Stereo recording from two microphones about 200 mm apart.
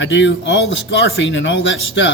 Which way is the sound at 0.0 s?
65° left (ahead or behind).